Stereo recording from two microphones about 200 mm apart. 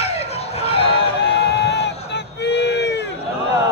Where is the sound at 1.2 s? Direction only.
60° left (ahead or behind).